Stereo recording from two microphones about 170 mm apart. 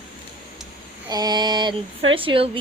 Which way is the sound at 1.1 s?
25° right (ahead or behind).